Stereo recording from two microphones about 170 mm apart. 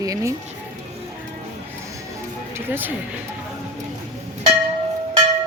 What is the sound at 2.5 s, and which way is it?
Speech, 10° right (ahead or behind).